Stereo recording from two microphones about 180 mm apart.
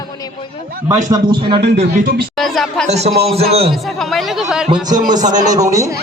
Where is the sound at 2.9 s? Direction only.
35° right (ahead or behind).